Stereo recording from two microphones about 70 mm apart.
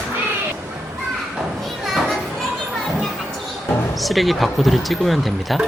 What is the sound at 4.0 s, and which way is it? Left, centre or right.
Speech, centre.